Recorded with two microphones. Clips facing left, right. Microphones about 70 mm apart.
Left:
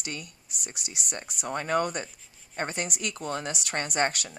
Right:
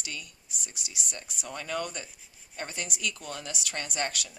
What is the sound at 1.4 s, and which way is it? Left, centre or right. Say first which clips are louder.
A woman's voice: left 7 dB; left.